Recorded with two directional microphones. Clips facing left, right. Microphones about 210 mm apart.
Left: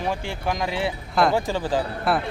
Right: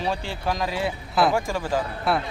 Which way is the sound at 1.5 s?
20° left (ahead or behind).